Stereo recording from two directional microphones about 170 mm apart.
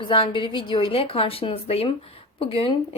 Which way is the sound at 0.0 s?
30° left (ahead or behind).